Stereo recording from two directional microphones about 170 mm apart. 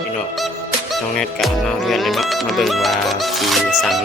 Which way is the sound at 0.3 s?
Centre (ahead or behind).